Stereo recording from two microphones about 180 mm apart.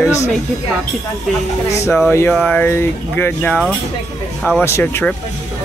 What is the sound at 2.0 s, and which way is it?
Speech, 10° left (ahead or behind).